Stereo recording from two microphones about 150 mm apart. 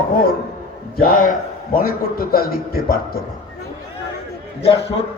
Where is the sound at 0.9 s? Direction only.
70° left (ahead or behind); by 3.2 s 90° left.